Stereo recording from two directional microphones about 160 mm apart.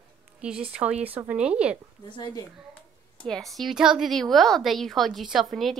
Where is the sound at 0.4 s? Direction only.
5° right (ahead or behind).